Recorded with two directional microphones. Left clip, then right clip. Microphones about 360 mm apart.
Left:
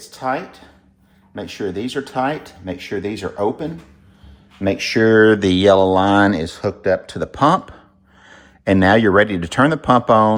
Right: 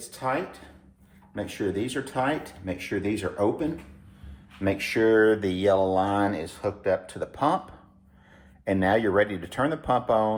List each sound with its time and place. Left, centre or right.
1.4 s speech: centre
4.6 s speech: left